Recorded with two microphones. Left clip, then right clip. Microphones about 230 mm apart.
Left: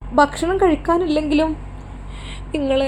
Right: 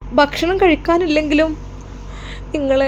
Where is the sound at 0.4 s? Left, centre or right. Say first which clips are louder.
Right 3 dB; right.